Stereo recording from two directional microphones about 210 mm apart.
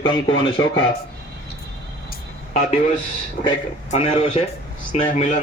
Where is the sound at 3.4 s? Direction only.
40° left (ahead or behind).